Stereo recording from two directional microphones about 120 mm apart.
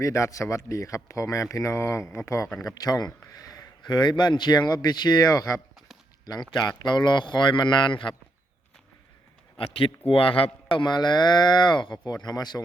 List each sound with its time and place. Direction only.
0.0 s a man's voice: 25° left (ahead or behind); by 8.1 s 40° left (ahead or behind)
9.6 s a man's voice: 50° left (ahead or behind)